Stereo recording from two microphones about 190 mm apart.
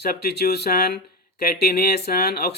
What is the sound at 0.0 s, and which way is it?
Speech, 55° left (ahead or behind).